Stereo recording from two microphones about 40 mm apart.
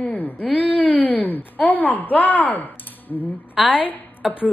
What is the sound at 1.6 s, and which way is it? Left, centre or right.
Speech, left.